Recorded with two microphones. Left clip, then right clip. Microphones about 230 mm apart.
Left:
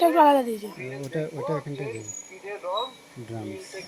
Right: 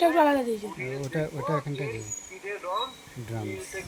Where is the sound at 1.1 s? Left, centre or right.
Right.